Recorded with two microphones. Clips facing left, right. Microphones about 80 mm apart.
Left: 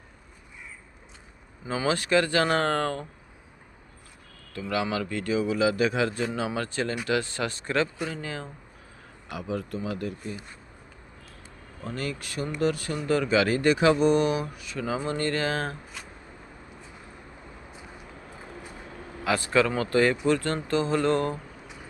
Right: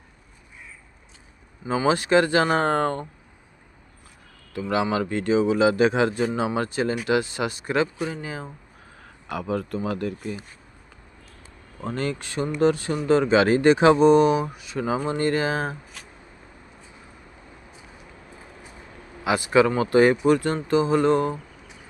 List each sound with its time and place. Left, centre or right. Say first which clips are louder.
1.6 s a man's voice: right 5 dB; centre
4.7 s a man's voice: right 5 dB; right
9.3 s speech: right 5 dB; right
11.8 s a man's voice: right 5 dB; right; by 15.8 s centre
19.2 s speech: right 4 dB; centre